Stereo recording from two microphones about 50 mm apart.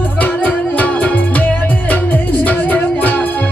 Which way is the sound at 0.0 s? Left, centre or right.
Left.